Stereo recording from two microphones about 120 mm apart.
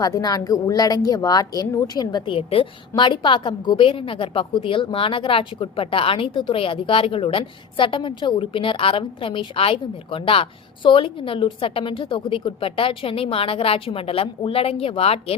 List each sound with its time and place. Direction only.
0.0 s a woman's voice: 30° left (ahead or behind); by 15.4 s 55° left (ahead or behind)